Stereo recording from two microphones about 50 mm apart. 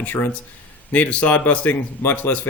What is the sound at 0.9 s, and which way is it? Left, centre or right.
Speech, left.